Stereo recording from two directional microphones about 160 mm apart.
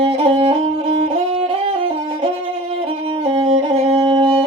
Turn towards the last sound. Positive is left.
turn(degrees=-35)  # may be behind; listen again after turning